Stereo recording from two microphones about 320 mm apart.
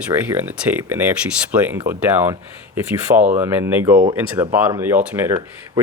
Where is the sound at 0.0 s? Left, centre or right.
Centre.